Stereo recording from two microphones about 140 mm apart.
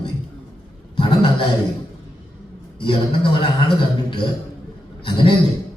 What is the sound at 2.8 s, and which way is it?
Music, 35° left (ahead or behind).